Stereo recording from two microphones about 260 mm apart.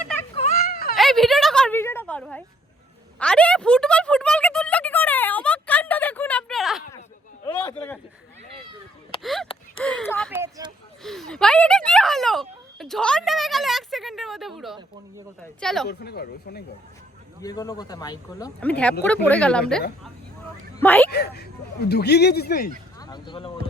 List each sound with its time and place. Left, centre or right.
0.3 s a sound: left
0.9 s a sound: centre
7.4 s a sound: centre
9.2 s a sound: centre
9.8 s speech: centre
10.3 s speech: centre
11.0 s speech: centre
15.9 s speech: left
17.4 s a man's voice: centre
20.8 s a man's voice: centre
21.1 s speech: left
23.0 s speech: centre